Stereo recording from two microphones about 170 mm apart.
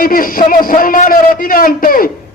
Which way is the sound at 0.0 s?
55° left (ahead or behind).